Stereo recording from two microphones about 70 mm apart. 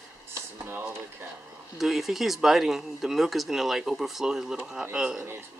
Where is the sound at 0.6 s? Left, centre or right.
Right.